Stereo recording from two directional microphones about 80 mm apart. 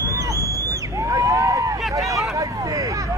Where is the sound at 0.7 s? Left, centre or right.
Right.